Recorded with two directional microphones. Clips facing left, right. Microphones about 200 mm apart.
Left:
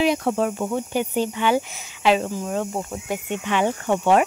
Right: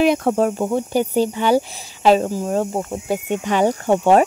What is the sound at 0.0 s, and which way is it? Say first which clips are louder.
Speech: right 4 dB; 50° right (ahead or behind).